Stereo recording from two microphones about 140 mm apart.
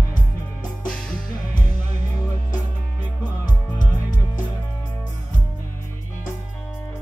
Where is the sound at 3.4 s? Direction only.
70° left (ahead or behind).